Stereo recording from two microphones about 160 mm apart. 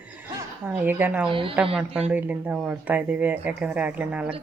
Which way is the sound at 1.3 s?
35° right (ahead or behind).